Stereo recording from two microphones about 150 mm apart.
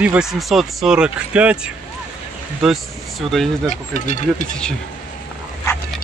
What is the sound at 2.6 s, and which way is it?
Speech, centre (ahead or behind).